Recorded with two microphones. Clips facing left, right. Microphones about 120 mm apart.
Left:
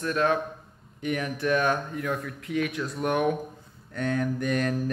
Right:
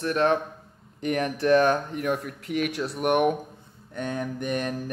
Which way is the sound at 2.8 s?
20° right (ahead or behind).